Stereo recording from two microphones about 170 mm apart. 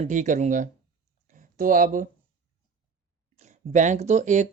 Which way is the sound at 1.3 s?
50° right (ahead or behind).